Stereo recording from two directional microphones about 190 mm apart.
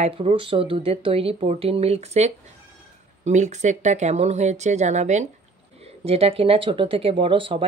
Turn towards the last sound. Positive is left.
turn(degrees=-25)  # may be behind; listen again after turning